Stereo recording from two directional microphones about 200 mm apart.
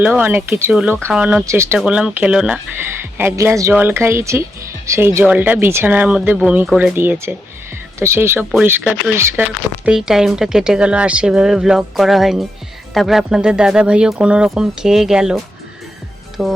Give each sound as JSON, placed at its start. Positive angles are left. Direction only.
{"t": 0.0, "sound": "speech", "side_deg": -10}
{"t": 16.4, "sound": "speech", "side_deg": 0}